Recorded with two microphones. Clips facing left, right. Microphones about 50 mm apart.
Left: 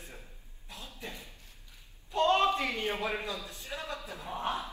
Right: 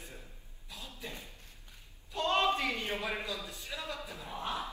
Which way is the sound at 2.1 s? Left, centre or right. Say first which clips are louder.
Left 4 dB; left.